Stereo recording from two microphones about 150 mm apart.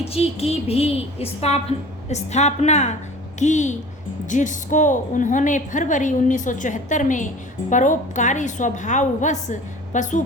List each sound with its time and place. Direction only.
0.0 s a woman's voice: 40° left (ahead or behind)